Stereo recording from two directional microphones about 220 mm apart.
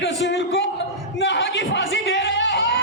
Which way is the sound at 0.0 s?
55° left (ahead or behind).